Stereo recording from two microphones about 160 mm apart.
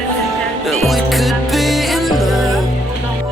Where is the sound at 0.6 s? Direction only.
Centre (ahead or behind).